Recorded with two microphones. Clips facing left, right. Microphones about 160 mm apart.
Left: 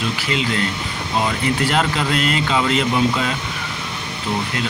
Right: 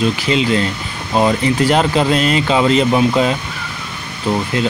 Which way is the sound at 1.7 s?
20° right (ahead or behind).